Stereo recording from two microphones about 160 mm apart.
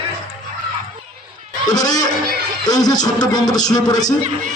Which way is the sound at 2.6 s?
25° left (ahead or behind).